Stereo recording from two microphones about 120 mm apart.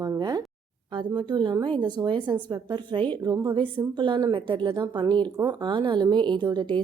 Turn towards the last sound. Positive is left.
turn(degrees=-40)  # may be behind; listen again after turning